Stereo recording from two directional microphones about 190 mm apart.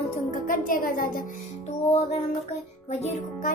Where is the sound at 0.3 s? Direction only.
45° left (ahead or behind).